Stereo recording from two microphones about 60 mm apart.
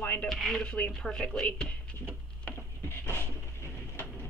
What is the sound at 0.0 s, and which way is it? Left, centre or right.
Dishes, left.